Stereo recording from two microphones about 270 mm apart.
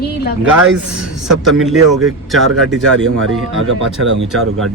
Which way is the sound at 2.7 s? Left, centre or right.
Right.